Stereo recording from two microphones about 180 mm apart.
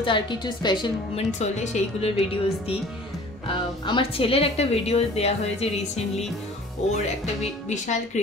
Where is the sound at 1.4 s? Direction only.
40° left (ahead or behind).